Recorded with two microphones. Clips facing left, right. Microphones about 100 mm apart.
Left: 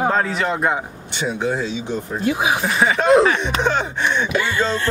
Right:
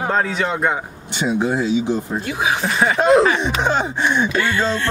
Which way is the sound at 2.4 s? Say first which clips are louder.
Even; 15° left (ahead or behind).